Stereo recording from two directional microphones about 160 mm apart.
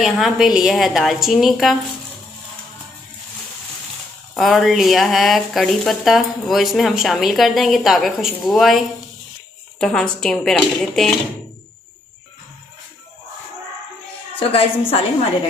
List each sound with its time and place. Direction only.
0.0 s speech: centre (ahead or behind)
4.4 s speech: centre (ahead or behind)
9.8 s speech: 5° left (ahead or behind)
14.3 s a woman's voice: 35° left (ahead or behind)